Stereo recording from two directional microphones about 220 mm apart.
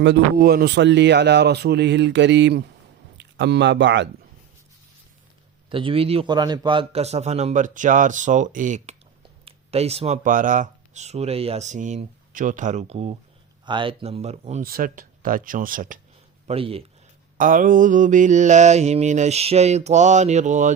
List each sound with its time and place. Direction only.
0.0 s a man's voice: 50° right (ahead or behind)
5.6 s a man's voice: 25° right (ahead or behind)
13.7 s mantra: 20° right (ahead or behind); by 16.0 s 40° right (ahead or behind)
16.5 s a man's voice: 25° right (ahead or behind)
17.3 s mantra: 40° right (ahead or behind)